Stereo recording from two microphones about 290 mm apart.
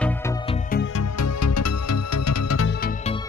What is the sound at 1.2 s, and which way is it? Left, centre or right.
Music, left.